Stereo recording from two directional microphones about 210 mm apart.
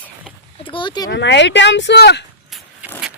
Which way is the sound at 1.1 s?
55° left (ahead or behind).